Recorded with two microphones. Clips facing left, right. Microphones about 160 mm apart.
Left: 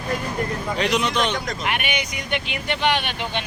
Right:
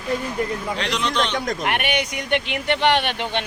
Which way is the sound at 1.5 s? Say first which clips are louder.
Right 3 dB; 60° right (ahead or behind).